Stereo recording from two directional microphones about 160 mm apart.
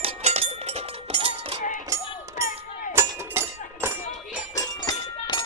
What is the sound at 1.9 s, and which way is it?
Music, 20° right (ahead or behind).